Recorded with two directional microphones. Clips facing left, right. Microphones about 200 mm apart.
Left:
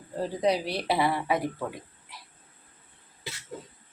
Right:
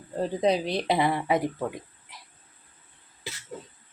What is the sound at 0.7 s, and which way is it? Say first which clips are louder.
Speech: right 2 dB; 20° right (ahead or behind).